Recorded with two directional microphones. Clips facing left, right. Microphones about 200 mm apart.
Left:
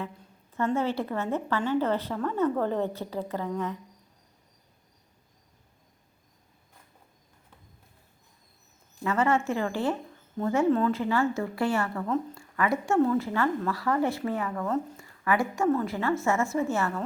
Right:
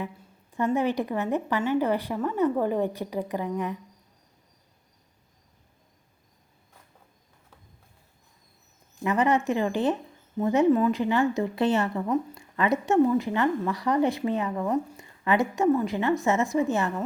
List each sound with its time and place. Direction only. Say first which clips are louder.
0.5 s a woman's voice: right 2 dB; 15° right (ahead or behind)
9.0 s a woman's voice: right 2 dB; 15° right (ahead or behind)